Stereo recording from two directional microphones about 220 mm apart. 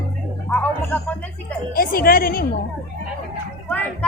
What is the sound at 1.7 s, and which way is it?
Speech, 40° left (ahead or behind).